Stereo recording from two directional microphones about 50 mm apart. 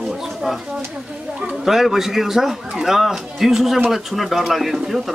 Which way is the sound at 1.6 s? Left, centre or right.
Centre.